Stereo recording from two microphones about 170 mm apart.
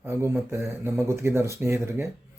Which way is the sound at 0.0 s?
15° right (ahead or behind).